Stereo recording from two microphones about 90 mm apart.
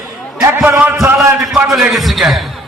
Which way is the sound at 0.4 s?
25° right (ahead or behind).